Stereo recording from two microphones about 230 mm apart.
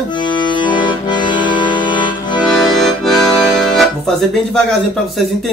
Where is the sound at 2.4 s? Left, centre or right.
Centre.